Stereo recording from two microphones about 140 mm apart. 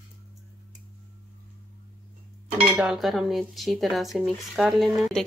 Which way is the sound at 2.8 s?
Centre (ahead or behind).